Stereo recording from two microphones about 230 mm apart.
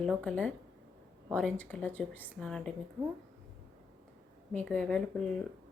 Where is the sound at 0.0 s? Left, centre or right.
Centre.